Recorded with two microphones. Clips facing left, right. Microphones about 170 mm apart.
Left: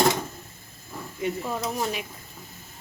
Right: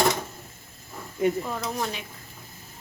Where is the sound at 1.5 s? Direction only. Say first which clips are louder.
Left 2 dB; 10° left (ahead or behind).